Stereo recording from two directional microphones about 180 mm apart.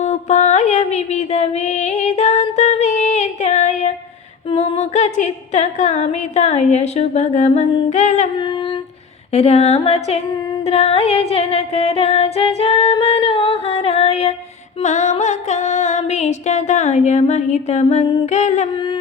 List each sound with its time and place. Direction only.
0.0 s music: 40° left (ahead or behind)
4.5 s humming: 35° left (ahead or behind)
9.3 s humming: 35° left (ahead or behind)
10.7 s music: 35° left (ahead or behind)
14.8 s humming: 40° left (ahead or behind)